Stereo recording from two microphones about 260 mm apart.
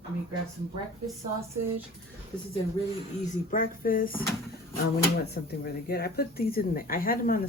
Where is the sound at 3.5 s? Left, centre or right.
Left.